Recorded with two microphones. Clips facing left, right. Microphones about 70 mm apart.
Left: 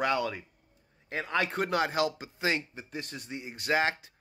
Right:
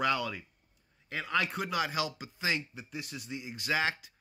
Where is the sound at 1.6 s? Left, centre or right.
Left.